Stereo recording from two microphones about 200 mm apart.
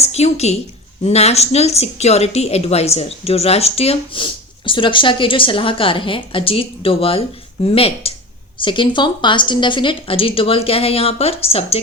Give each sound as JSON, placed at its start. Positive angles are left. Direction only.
{"t": 0.0, "sound": "a woman's voice", "side_deg": 30}